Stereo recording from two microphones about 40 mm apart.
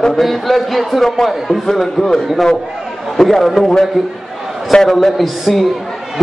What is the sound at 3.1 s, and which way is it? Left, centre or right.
Speech, centre.